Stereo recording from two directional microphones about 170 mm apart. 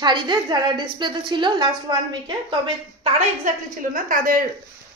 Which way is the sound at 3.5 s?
50° right (ahead or behind).